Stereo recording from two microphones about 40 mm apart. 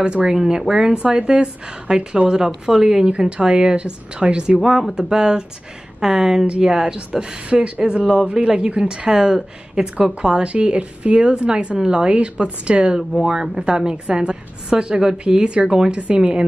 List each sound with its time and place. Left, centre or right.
0.0 s a woman's voice: right
0.3 s a woman's voice: centre
4.6 s a woman's voice: centre
7.1 s a woman's voice: right
13.1 s a woman's voice: centre